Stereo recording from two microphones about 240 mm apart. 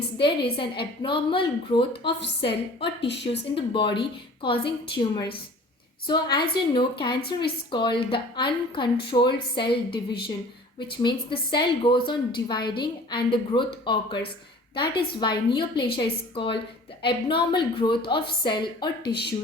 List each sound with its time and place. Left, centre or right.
0.2 s a woman's voice: left